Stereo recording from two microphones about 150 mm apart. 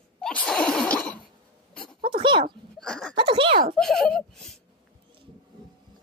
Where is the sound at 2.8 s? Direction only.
5° left (ahead or behind).